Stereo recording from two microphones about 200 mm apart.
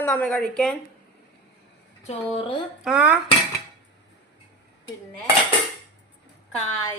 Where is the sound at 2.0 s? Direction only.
25° left (ahead or behind).